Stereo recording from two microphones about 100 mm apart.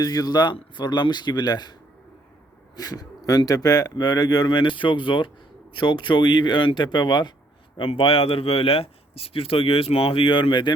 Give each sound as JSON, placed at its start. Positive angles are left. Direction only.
{"t": 0.0, "sound": "speech", "side_deg": 40}
{"t": 2.7, "sound": "speech", "side_deg": 40}
{"t": 7.8, "sound": "speech", "side_deg": 65}